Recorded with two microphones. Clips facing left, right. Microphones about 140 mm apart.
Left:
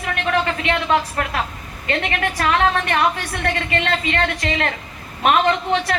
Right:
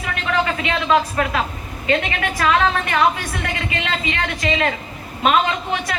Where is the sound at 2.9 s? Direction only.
55° left (ahead or behind).